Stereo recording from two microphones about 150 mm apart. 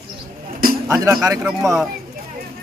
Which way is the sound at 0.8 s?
20° right (ahead or behind).